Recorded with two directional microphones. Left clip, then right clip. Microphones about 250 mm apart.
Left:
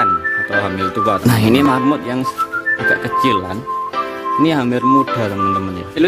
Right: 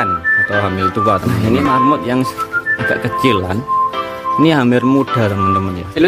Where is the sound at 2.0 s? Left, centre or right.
Centre.